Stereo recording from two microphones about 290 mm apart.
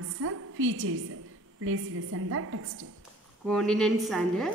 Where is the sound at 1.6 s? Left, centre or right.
Right.